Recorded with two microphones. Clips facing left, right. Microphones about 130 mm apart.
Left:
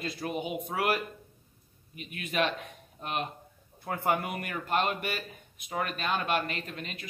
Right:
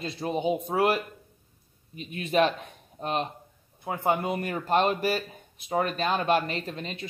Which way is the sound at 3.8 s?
20° right (ahead or behind).